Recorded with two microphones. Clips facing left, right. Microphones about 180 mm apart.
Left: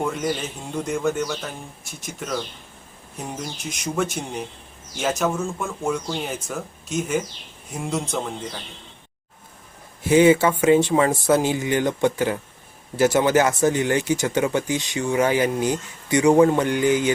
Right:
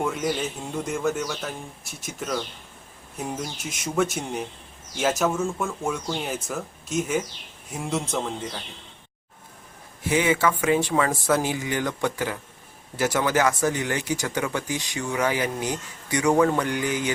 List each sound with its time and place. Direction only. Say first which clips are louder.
0.0 s a man's voice: left 1 dB; centre (ahead or behind)
10.1 s speech: left 7 dB; 30° left (ahead or behind)